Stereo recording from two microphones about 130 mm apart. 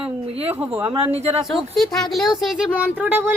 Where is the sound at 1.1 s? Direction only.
55° right (ahead or behind).